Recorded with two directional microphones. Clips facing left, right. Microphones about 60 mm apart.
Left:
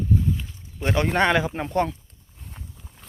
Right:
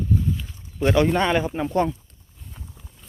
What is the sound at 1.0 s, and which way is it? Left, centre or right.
Speech, left.